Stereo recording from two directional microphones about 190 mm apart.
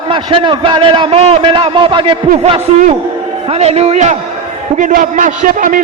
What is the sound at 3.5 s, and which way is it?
A man's voice, 35° right (ahead or behind).